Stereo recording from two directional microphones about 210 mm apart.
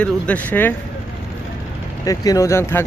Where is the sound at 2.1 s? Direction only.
15° left (ahead or behind).